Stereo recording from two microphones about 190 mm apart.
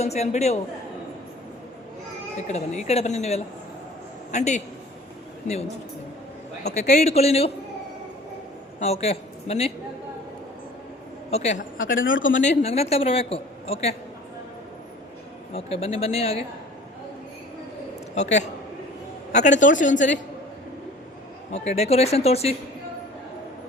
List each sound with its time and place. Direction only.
0.0 s a man's voice: 35° left (ahead or behind)
2.5 s a man's voice: 35° left (ahead or behind)
6.7 s a man's voice: 35° left (ahead or behind)
8.8 s a man's voice: 35° left (ahead or behind)
11.3 s a man's voice: 35° left (ahead or behind)
11.9 s speech: 90° left
12.4 s a man's voice: 35° left (ahead or behind)
15.5 s a man's voice: 30° left (ahead or behind)
18.1 s a man's voice: 35° left (ahead or behind)
21.5 s a man's voice: 35° left (ahead or behind)